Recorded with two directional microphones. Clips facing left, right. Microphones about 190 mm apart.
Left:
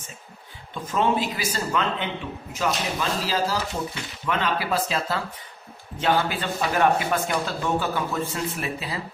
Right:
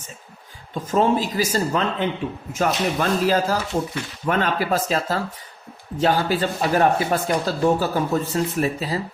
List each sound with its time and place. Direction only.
0.7 s speech: 40° right (ahead or behind)